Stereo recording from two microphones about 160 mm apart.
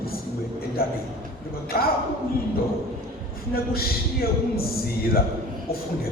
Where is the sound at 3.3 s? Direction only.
70° left (ahead or behind).